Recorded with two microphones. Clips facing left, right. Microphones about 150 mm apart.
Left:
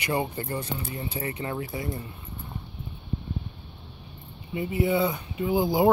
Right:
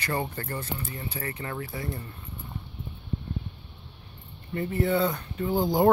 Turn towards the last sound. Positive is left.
turn(degrees=5)  # may be behind; listen again after turning